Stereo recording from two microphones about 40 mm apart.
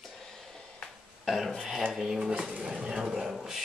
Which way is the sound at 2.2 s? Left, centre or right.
Right.